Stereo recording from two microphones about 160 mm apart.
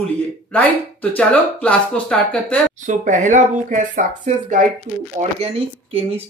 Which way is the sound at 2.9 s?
50° right (ahead or behind).